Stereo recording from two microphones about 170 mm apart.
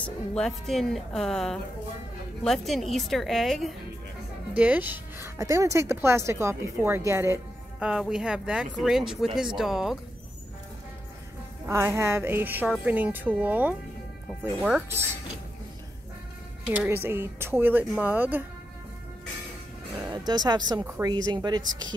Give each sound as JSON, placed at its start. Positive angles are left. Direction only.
{"t": 0.0, "sound": "speech", "side_deg": 5}
{"t": 4.6, "sound": "a woman's voice", "side_deg": -10}
{"t": 7.8, "sound": "speech", "side_deg": -5}
{"t": 11.6, "sound": "a woman's voice", "side_deg": -15}
{"t": 16.6, "sound": "a woman's voice", "side_deg": -10}
{"t": 20.0, "sound": "speech", "side_deg": -25}